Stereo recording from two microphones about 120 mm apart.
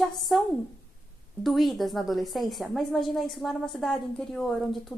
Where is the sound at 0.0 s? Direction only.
Centre (ahead or behind).